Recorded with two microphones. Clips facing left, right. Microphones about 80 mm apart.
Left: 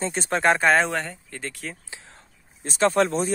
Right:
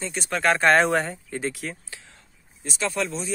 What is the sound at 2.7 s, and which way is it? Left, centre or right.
Speech, left.